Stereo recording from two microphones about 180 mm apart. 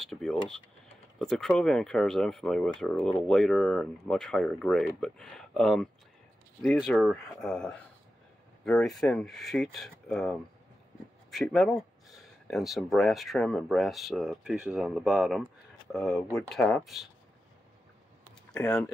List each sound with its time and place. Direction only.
0.0 s speech: centre (ahead or behind)